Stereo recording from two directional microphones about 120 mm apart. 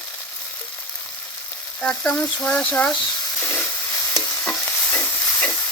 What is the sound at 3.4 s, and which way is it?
Steam, 15° left (ahead or behind).